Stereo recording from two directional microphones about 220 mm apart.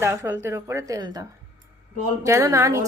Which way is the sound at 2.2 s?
15° right (ahead or behind).